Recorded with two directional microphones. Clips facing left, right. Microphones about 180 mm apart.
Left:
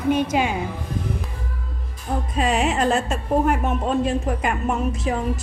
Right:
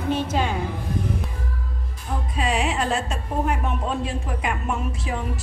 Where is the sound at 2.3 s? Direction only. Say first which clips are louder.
Left 3 dB; 45° left (ahead or behind).